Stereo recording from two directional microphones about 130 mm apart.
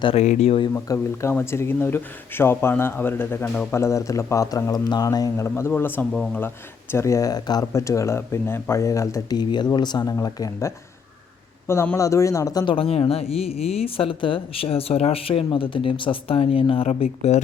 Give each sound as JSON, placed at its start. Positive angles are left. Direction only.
{"t": 0.2, "sound": "speech", "side_deg": 60}
{"t": 0.7, "sound": "speech", "side_deg": 20}
{"t": 11.7, "sound": "speech", "side_deg": 20}
{"t": 12.7, "sound": "speech", "side_deg": 45}